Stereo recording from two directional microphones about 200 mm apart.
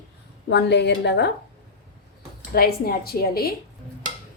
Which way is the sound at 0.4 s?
60° left (ahead or behind).